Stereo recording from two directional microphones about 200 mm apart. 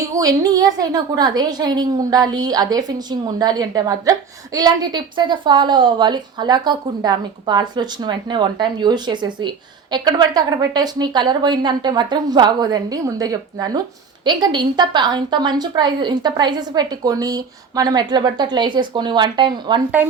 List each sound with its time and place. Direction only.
0.1 s a woman's voice: 15° right (ahead or behind)